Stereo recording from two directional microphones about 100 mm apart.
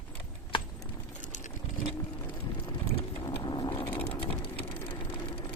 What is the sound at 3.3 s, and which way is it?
Vehicle, 45° left (ahead or behind).